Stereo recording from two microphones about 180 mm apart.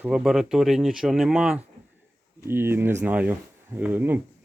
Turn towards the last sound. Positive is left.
turn(degrees=-10)  # may be behind; listen again after turning